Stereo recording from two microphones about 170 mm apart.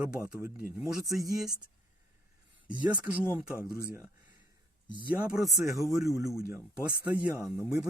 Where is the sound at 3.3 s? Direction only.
5° right (ahead or behind).